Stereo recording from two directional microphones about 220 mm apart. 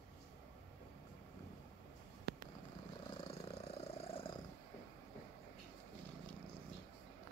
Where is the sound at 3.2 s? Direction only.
25° left (ahead or behind).